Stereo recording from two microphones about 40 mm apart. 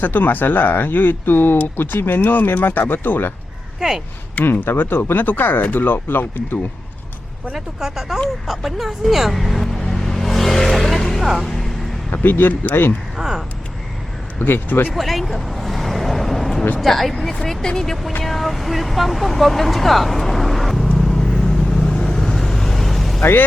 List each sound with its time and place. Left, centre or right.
0.0 s speech: left
3.8 s speech: centre
4.4 s speech: left
4.7 s speech: left
7.5 s speech: centre
9.8 s vehicle: centre
12.1 s speech: left
13.1 s speech: centre
14.3 s speech: left
14.9 s speech: centre
21.0 s vehicle: centre